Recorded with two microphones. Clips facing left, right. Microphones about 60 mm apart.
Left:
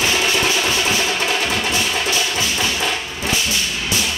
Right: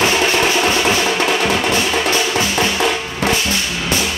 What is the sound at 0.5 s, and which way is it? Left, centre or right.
Music, right.